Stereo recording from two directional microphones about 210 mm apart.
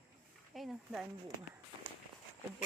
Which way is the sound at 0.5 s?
Centre (ahead or behind).